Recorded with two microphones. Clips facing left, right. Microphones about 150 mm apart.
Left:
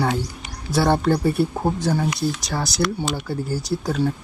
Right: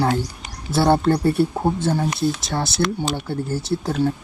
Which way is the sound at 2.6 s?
25° right (ahead or behind).